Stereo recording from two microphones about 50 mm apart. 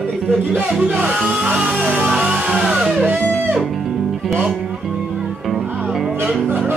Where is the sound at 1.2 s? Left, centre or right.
Right.